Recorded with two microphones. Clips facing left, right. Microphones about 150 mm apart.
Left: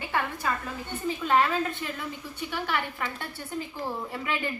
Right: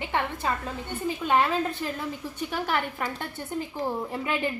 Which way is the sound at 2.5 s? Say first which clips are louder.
Right 2 dB; 45° right (ahead or behind).